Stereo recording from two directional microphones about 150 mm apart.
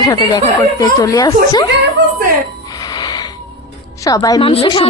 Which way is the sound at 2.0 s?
90° right.